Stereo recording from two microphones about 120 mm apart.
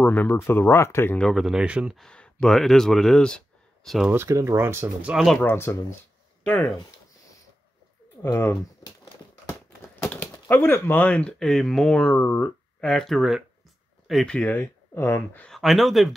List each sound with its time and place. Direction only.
0.0 s speech: 15° left (ahead or behind)
1.2 s speech: centre (ahead or behind)
2.0 s speech: 5° left (ahead or behind)
4.1 s speech: 20° right (ahead or behind)
5.0 s speech: centre (ahead or behind)
5.4 s speech: 20° left (ahead or behind)
6.4 s speech: 15° left (ahead or behind)
8.2 s speech: 25° left (ahead or behind)
10.0 s a sound: 10° left (ahead or behind)
10.5 s speech: 20° left (ahead or behind)
15.4 s speech: centre (ahead or behind)